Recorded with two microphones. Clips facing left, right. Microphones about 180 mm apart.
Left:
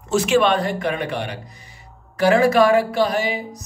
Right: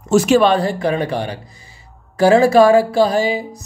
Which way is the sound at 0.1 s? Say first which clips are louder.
Right 5 dB; 40° right (ahead or behind).